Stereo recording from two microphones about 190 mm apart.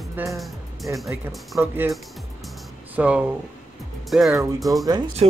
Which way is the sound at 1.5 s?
10° right (ahead or behind).